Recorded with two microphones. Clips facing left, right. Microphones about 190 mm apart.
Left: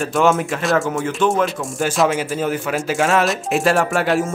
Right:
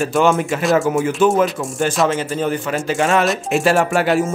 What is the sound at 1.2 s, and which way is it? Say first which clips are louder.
Speech: right 2 dB; 5° right (ahead or behind).